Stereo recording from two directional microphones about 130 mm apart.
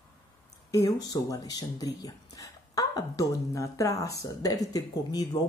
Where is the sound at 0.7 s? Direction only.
25° left (ahead or behind).